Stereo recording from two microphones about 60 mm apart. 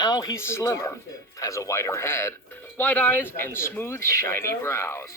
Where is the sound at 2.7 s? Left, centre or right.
Left.